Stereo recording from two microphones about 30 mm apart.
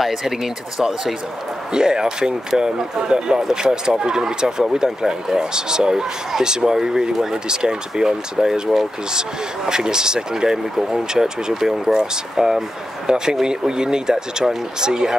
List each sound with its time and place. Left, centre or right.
1.7 s speech: right